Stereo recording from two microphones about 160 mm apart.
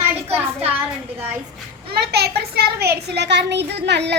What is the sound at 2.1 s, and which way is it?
A child's voice, 85° right.